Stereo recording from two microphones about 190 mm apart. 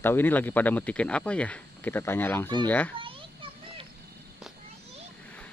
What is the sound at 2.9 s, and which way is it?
Children playing, 25° right (ahead or behind).